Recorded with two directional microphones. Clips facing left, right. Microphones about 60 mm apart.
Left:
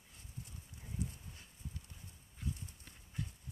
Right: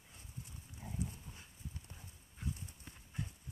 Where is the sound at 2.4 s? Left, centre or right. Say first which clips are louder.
Even; centre.